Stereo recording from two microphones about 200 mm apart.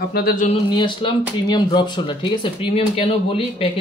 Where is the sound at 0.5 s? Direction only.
25° left (ahead or behind).